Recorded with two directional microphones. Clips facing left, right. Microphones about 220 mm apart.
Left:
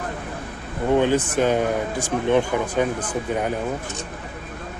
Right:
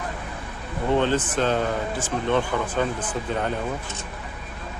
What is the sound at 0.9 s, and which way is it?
Speech, 10° left (ahead or behind).